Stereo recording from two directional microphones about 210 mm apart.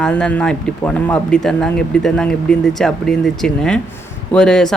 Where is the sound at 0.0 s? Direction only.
5° left (ahead or behind).